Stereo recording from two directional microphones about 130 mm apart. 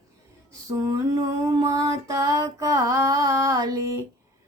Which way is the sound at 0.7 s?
25° right (ahead or behind).